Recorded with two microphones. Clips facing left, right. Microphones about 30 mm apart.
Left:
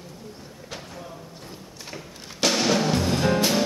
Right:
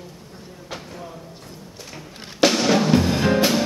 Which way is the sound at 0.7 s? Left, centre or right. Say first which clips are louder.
Right 3 dB; centre.